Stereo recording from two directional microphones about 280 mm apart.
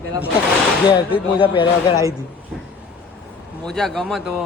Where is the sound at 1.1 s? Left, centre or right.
Centre.